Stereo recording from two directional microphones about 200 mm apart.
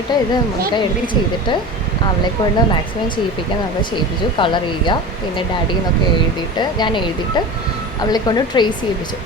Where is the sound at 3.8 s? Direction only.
25° left (ahead or behind).